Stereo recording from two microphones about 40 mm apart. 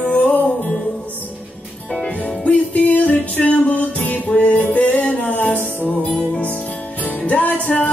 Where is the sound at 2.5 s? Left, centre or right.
Left.